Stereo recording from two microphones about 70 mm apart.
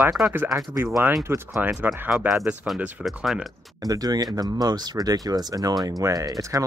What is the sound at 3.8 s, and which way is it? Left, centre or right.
Speech, right.